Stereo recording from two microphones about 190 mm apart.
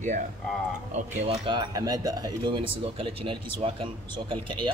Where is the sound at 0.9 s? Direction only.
25° right (ahead or behind).